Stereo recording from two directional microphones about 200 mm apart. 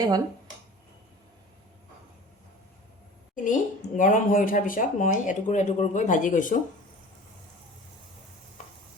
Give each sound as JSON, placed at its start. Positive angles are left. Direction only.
{"t": 3.3, "sound": "speech", "side_deg": 40}